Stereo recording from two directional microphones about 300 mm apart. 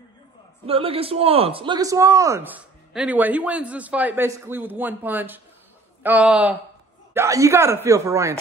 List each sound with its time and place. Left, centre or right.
0.7 s a man's voice: centre